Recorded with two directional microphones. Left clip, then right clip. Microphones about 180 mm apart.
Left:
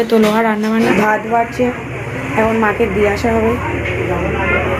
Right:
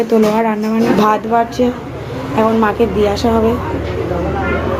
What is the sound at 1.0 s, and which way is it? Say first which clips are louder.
Speech: right 1 dB; 15° right (ahead or behind).